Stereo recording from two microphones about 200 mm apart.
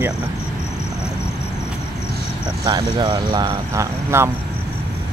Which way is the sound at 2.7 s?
20° right (ahead or behind).